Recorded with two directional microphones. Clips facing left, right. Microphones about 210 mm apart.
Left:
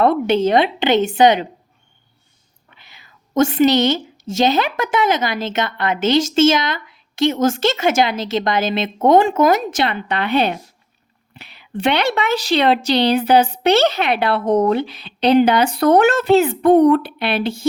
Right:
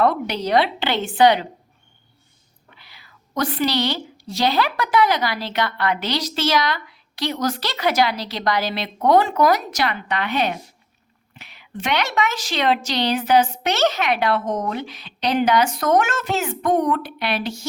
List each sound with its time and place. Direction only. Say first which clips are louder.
0.0 s speech: left 6 dB; 25° left (ahead or behind)
2.7 s whispering: left 2 dB; 20° left (ahead or behind)
4.4 s speech: left 4 dB; 20° left (ahead or behind)
11.3 s a sound: left 3 dB; 30° left (ahead or behind)
11.8 s a woman's voice: left 4 dB; 30° left (ahead or behind)